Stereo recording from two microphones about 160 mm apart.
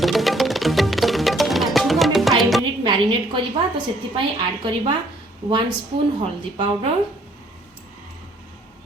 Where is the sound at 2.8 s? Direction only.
30° right (ahead or behind).